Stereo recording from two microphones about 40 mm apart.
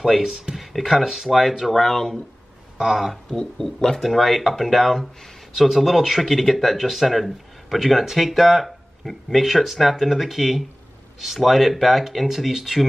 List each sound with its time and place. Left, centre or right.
0.2 s speech: centre
0.6 s speech: centre
1.7 s speech: centre
2.8 s speech: centre
3.3 s speech: centre